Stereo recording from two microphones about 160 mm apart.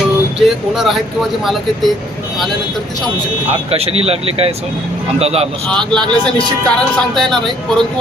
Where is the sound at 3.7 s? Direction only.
40° right (ahead or behind).